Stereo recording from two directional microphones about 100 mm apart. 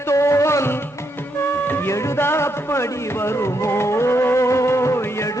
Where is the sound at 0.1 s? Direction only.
30° left (ahead or behind).